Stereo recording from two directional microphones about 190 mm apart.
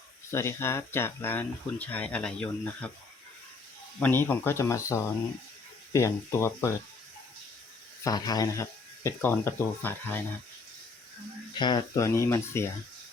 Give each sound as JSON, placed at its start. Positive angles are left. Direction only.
{"t": 0.3, "sound": "speech", "side_deg": 15}
{"t": 4.0, "sound": "speech", "side_deg": 10}
{"t": 8.0, "sound": "speech", "side_deg": 20}
{"t": 11.6, "sound": "speech", "side_deg": 20}